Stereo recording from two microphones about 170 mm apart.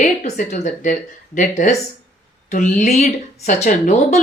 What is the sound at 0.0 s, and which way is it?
Speech, 45° left (ahead or behind).